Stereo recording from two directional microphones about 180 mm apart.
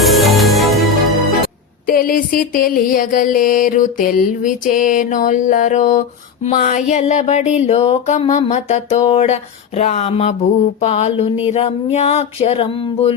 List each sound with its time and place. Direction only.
0.0 s music: centre (ahead or behind)
1.9 s music: 55° left (ahead or behind)
6.9 s a sound: 40° left (ahead or behind)